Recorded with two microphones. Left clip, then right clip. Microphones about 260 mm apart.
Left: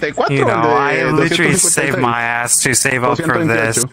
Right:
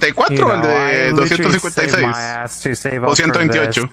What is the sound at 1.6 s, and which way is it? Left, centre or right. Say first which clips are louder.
Speech: right 1 dB; right.